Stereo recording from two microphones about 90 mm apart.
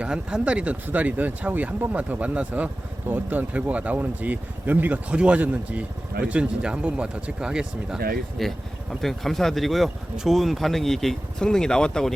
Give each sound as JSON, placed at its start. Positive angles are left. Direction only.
{"t": 0.0, "sound": "speech", "side_deg": -10}
{"t": 8.4, "sound": "speech", "side_deg": 0}